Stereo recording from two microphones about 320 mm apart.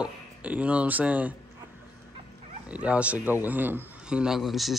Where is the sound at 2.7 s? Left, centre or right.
Centre.